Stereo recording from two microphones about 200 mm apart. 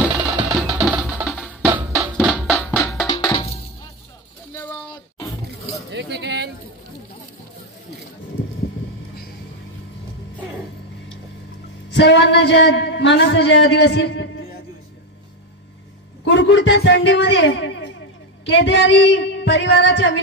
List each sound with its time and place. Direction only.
0.0 s music: 5° right (ahead or behind)
2.3 s music: 10° left (ahead or behind)
3.1 s music: 20° left (ahead or behind)
5.9 s a sound: 60° right (ahead or behind)
11.9 s speech: 60° left (ahead or behind)
16.3 s a sound: 65° left (ahead or behind)
18.4 s speech: 65° left (ahead or behind)